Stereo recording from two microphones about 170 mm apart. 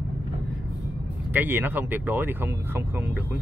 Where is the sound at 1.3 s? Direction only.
10° right (ahead or behind).